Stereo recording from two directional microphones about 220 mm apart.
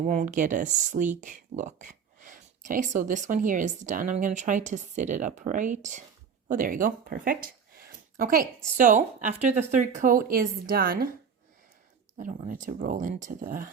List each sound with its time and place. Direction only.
0.0 s speech: 35° right (ahead or behind)
12.1 s speech: 35° right (ahead or behind)